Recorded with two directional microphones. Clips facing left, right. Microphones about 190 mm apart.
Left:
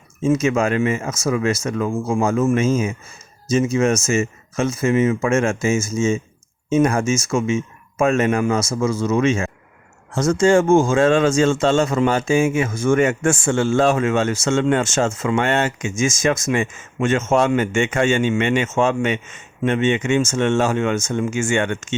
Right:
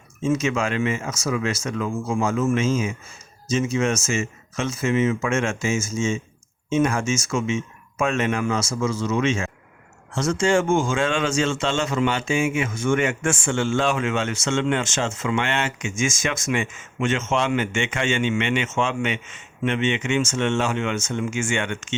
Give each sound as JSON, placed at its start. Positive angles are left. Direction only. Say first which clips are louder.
{"t": 0.2, "sound": "speech", "louder": "left 5 dB", "side_deg": 40}